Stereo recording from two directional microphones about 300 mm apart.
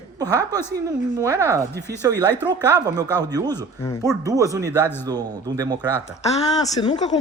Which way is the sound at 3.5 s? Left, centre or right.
Centre.